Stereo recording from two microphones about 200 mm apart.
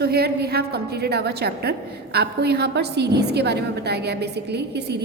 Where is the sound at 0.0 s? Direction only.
55° right (ahead or behind).